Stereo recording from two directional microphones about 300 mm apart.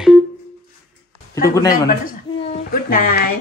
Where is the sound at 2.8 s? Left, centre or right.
Left.